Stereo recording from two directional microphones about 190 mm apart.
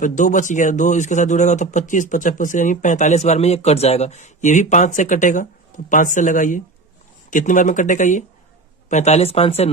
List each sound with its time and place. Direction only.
0.0 s speech: 45° left (ahead or behind)